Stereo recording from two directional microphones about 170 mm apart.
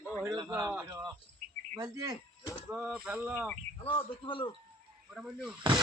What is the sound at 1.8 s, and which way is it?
Speech, 20° right (ahead or behind).